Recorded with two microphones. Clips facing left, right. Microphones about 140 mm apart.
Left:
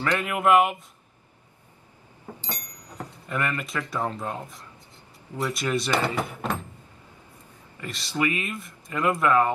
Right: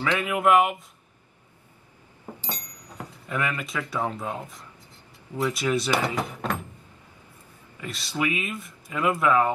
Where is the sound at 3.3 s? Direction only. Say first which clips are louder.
Even; centre (ahead or behind).